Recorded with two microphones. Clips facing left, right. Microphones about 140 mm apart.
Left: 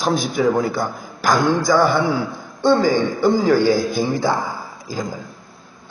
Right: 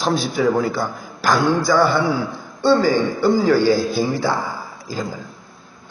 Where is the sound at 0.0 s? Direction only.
15° left (ahead or behind).